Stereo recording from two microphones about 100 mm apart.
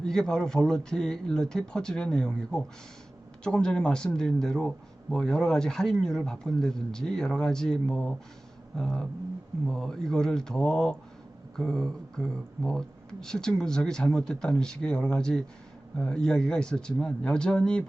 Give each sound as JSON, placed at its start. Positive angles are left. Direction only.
{"t": 0.0, "sound": "speech", "side_deg": 5}